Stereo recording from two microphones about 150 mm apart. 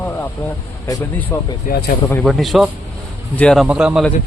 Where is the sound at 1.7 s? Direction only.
65° left (ahead or behind).